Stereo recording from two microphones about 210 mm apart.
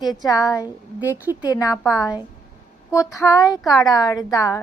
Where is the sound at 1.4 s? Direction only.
15° left (ahead or behind).